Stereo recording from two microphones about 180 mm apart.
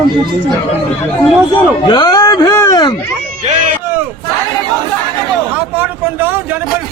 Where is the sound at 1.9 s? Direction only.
25° left (ahead or behind).